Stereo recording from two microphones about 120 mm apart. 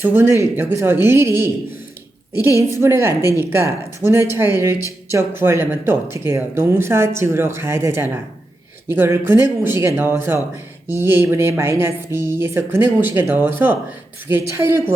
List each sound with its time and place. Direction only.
0.0 s speech: 20° right (ahead or behind)